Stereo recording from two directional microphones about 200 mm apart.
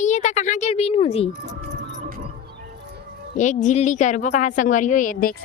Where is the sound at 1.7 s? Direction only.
45° right (ahead or behind).